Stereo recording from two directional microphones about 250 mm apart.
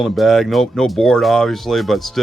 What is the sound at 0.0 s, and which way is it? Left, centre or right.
Speech, centre.